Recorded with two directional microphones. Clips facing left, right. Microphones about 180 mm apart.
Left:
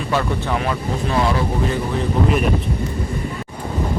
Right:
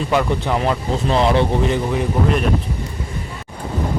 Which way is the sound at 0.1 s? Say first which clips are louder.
Right 2 dB; 15° right (ahead or behind).